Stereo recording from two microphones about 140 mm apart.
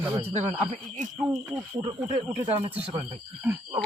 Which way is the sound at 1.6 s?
25° right (ahead or behind).